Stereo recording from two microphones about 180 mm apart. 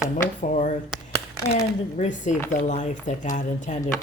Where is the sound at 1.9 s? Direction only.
40° left (ahead or behind).